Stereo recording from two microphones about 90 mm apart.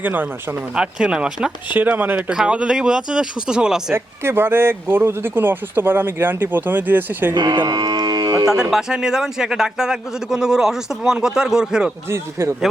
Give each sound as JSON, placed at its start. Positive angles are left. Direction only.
{"t": 0.0, "sound": "speech", "side_deg": -20}
{"t": 0.8, "sound": "a man's voice", "side_deg": -10}
{"t": 1.7, "sound": "a man's voice", "side_deg": -20}
{"t": 3.9, "sound": "speech", "side_deg": -25}
{"t": 7.3, "sound": "speech", "side_deg": -55}
{"t": 7.7, "sound": "a sound", "side_deg": -45}
{"t": 8.4, "sound": "a man's voice", "side_deg": -5}
{"t": 12.0, "sound": "speech", "side_deg": -30}